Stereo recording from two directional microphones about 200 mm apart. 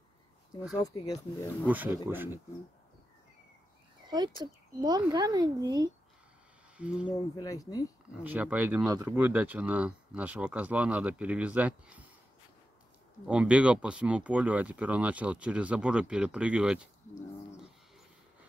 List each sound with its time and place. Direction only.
0.8 s speech: 20° left (ahead or behind)
1.7 s speech: 10° right (ahead or behind)
4.1 s speech: 20° right (ahead or behind)
6.8 s speech: 5° right (ahead or behind)
7.1 s speech: 20° left (ahead or behind)
8.2 s speech: 5° right (ahead or behind)
13.3 s speech: 5° right (ahead or behind)